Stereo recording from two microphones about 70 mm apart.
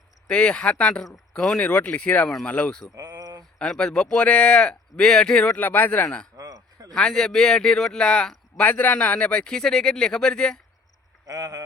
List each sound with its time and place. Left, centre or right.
0.3 s speech: centre
2.9 s speech: right
3.6 s speech: centre
5.5 s speech: left
6.3 s a sound: right
6.9 s speech: centre
8.6 s speech: left
11.3 s speech: right